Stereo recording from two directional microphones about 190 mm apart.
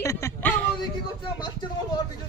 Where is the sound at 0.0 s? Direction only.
15° left (ahead or behind).